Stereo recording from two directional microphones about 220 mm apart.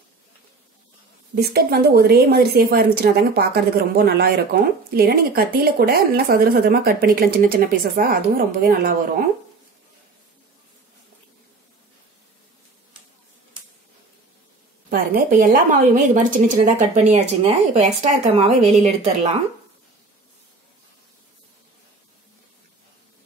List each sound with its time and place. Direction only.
1.3 s speech: 45° right (ahead or behind)
14.9 s a woman's voice: 45° right (ahead or behind)